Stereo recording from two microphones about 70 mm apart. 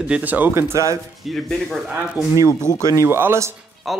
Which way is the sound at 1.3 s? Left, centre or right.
Centre.